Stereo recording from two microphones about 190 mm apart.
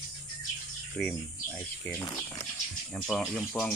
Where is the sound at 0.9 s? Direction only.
5° left (ahead or behind).